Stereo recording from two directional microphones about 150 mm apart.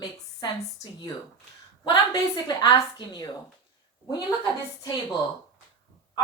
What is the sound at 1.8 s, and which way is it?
A woman's voice, 25° left (ahead or behind).